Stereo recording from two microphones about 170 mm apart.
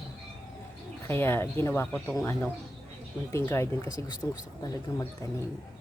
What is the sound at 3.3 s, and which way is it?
Speech, 20° left (ahead or behind).